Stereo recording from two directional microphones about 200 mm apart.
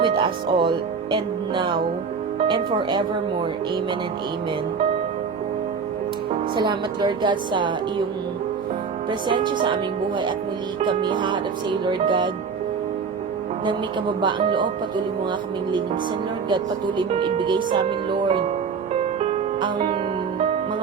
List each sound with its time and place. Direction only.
0.0 s speech: 25° right (ahead or behind)
6.6 s speech: 20° right (ahead or behind)
9.0 s speech: 25° right (ahead or behind)
14.2 s speech: 25° right (ahead or behind)
17.0 s speech: 25° right (ahead or behind)
19.2 s music: 35° right (ahead or behind)